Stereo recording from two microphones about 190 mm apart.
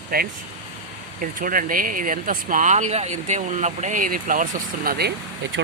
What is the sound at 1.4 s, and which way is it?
Speech, 45° right (ahead or behind).